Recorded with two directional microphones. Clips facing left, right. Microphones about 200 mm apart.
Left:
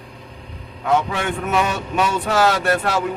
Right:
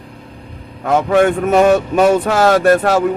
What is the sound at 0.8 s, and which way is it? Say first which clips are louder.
Speech: right 8 dB; 50° right (ahead or behind).